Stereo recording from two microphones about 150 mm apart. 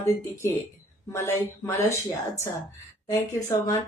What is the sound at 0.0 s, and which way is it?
Speech, 15° left (ahead or behind).